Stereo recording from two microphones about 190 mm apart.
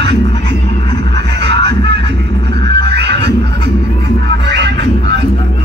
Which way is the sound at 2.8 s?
65° right (ahead or behind).